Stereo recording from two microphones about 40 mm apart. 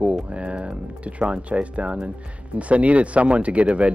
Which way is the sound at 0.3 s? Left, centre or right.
Right.